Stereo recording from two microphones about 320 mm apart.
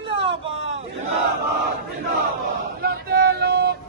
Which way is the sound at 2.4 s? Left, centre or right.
Right.